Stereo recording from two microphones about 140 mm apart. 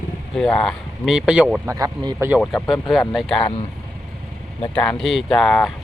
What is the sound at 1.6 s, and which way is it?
Speech, 25° right (ahead or behind).